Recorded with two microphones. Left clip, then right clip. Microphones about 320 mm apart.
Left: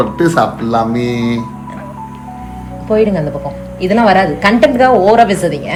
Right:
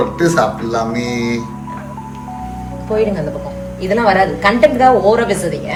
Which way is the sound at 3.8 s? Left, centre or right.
Left.